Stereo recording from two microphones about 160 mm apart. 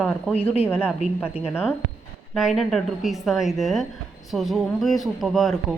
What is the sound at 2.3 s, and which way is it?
A woman's voice, centre (ahead or behind).